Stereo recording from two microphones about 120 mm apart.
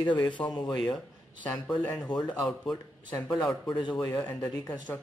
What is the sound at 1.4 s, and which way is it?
Speech, 15° left (ahead or behind).